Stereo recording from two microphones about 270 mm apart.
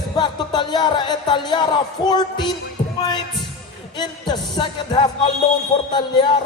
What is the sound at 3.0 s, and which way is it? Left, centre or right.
Music, centre.